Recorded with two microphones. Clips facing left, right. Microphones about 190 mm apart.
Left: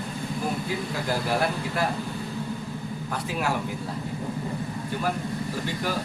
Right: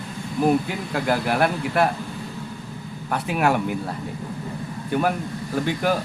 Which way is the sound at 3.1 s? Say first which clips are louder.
Right 7 dB; 65° right (ahead or behind).